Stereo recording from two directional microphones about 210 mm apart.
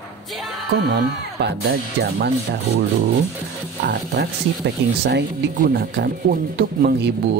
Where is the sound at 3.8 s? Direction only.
50° right (ahead or behind).